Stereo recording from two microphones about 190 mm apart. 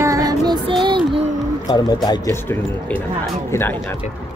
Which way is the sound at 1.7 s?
20° left (ahead or behind).